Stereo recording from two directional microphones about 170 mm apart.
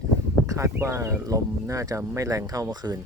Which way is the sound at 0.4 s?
20° right (ahead or behind).